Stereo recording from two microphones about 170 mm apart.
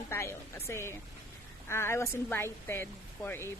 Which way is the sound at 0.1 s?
15° left (ahead or behind).